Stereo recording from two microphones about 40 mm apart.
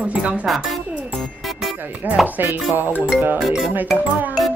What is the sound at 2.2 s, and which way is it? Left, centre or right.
Music, right.